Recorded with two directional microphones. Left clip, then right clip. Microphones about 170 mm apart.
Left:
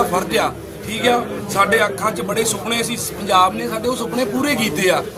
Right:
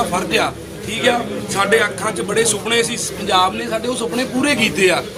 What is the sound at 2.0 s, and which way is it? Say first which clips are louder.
Speech: left 1 dB; 5° left (ahead or behind).